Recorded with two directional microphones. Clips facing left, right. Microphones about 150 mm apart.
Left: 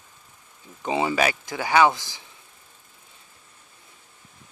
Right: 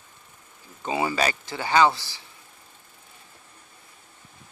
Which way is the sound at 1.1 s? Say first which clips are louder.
Left 2 dB; 10° left (ahead or behind).